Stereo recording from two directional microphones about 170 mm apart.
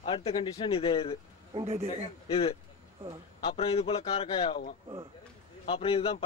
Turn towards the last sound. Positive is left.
turn(degrees=30)  # may be behind; listen again after turning